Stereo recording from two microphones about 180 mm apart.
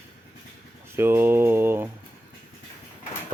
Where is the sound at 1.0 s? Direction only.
10° right (ahead or behind).